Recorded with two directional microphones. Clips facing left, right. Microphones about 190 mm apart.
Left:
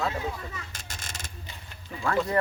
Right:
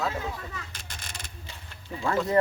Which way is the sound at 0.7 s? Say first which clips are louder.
Left 1 dB; 45° left (ahead or behind).